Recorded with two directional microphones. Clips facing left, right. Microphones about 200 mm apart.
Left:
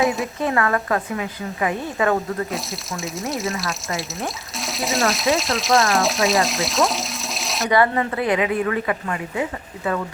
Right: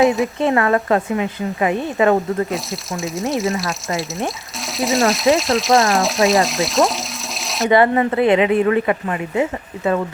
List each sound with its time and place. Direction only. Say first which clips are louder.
0.3 s speech: right 5 dB; 20° right (ahead or behind)
2.5 s speech: right 4 dB; centre (ahead or behind)
7.7 s speech: right 5 dB; 25° right (ahead or behind)